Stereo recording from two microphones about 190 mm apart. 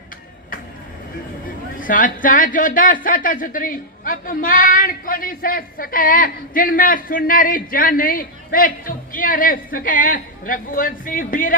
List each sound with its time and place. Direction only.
1.8 s speech: 45° left (ahead or behind)